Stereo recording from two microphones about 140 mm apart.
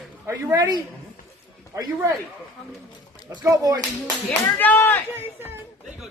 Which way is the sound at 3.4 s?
25° right (ahead or behind).